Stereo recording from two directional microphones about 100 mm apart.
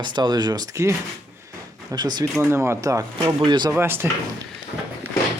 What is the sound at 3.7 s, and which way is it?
Speech, 25° right (ahead or behind).